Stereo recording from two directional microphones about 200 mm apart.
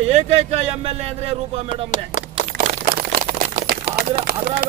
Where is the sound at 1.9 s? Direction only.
35° left (ahead or behind).